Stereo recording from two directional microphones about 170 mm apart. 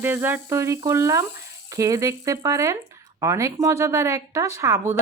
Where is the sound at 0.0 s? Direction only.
10° right (ahead or behind).